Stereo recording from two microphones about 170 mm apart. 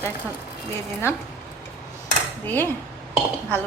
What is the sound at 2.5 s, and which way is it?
Speech, 10° left (ahead or behind).